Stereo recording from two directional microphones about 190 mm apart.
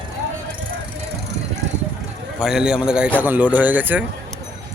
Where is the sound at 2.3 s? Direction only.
5° right (ahead or behind).